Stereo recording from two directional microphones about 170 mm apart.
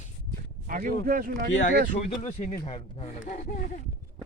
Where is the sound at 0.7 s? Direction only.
55° right (ahead or behind).